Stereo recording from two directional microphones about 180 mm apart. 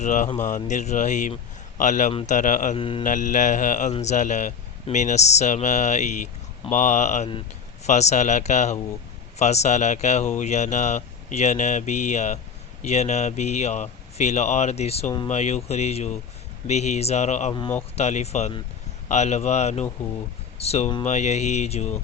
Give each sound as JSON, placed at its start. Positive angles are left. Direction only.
{"t": 0.0, "sound": "mantra", "side_deg": 45}
{"t": 0.4, "sound": "speech", "side_deg": 45}
{"t": 1.8, "sound": "mantra", "side_deg": 45}
{"t": 2.7, "sound": "mantra", "side_deg": 30}
{"t": 3.0, "sound": "mantra", "side_deg": 45}
{"t": 3.9, "sound": "speech", "side_deg": 40}